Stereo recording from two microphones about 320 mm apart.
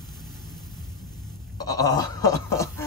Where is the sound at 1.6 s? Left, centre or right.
Centre.